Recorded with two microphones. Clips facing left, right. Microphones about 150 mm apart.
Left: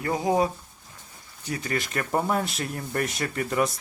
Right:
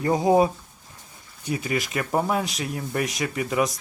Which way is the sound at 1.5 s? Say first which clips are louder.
Right 3 dB; 15° right (ahead or behind).